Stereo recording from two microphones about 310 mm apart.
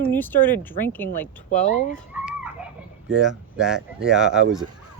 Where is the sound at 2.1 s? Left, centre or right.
Centre.